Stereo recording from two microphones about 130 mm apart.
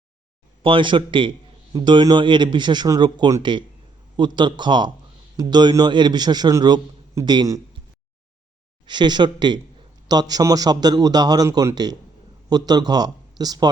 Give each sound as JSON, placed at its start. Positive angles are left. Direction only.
{"t": 0.6, "sound": "a man's voice", "side_deg": -40}
{"t": 8.9, "sound": "a man's voice", "side_deg": -35}